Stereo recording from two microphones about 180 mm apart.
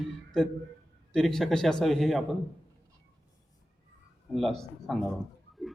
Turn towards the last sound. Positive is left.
turn(degrees=0)  # may be behind; listen again after turning